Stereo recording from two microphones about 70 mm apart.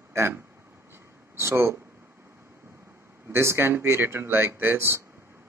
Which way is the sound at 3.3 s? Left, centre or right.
Right.